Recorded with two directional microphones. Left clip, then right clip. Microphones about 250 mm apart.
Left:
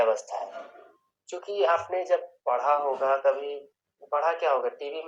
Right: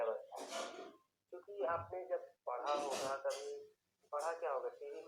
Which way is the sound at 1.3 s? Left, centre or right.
Left.